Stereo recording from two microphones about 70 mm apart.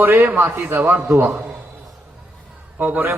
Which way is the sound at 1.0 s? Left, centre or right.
Right.